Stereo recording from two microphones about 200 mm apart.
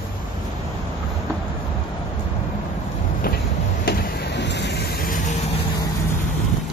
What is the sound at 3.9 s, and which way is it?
Vehicle, 55° left (ahead or behind).